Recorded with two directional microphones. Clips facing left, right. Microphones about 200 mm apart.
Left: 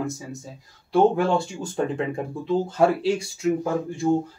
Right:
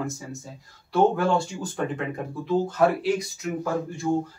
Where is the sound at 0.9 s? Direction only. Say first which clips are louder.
Left 2 dB; 25° left (ahead or behind).